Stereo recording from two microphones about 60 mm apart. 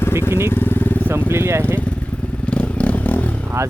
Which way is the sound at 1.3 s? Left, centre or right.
Right.